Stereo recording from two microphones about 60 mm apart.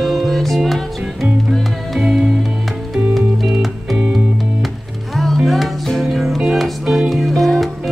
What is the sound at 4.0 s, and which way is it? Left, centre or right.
Music, centre.